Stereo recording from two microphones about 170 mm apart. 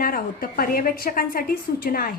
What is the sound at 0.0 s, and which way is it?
A woman's voice, 55° left (ahead or behind).